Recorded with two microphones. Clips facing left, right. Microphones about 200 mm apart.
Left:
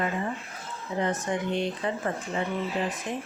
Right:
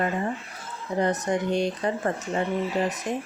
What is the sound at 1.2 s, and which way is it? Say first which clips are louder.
Speech: right 4 dB; 40° right (ahead or behind).